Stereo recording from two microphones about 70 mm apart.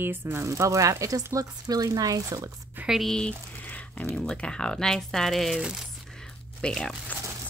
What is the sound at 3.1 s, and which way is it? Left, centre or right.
Speech, centre.